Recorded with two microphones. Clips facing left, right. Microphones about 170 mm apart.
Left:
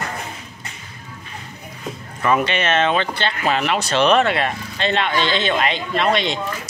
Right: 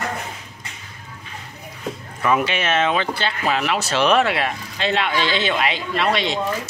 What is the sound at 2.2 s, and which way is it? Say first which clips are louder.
Speech: left 1 dB; 5° right (ahead or behind).